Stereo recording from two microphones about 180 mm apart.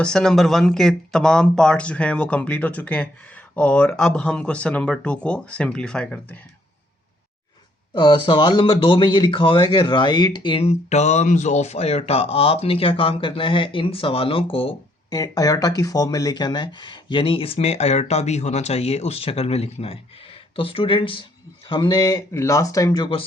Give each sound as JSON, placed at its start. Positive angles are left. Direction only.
{"t": 0.0, "sound": "speech", "side_deg": 5}
{"t": 7.9, "sound": "speech", "side_deg": 25}
{"t": 15.1, "sound": "speech", "side_deg": 20}